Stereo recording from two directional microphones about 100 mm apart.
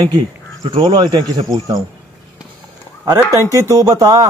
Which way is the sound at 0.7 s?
55° right (ahead or behind).